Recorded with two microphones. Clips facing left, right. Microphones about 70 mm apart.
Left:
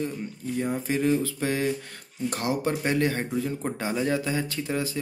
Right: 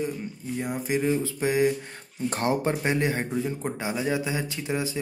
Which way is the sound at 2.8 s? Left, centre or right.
Centre.